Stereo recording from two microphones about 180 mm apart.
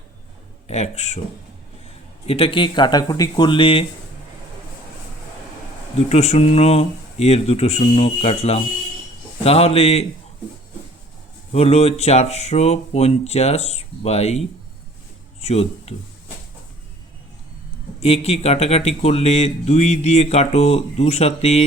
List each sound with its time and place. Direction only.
0.7 s speech: 35° left (ahead or behind)
2.2 s speech: 30° left (ahead or behind)
6.1 s speech: 35° left (ahead or behind)
11.5 s speech: 35° left (ahead or behind)
18.0 s speech: 35° left (ahead or behind)